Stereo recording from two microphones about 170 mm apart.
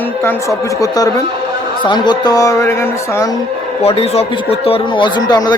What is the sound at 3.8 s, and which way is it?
Speech, 35° left (ahead or behind).